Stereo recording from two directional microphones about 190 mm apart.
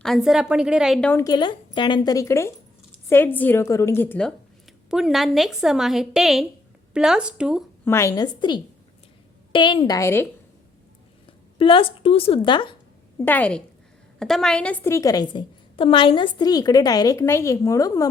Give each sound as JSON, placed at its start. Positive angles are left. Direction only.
{"t": 0.0, "sound": "a woman's voice", "side_deg": 0}
{"t": 1.1, "sound": "a woman's voice", "side_deg": 20}
{"t": 7.9, "sound": "a woman's voice", "side_deg": 15}
{"t": 11.5, "sound": "a woman's voice", "side_deg": 30}
{"t": 13.1, "sound": "a woman's voice", "side_deg": 10}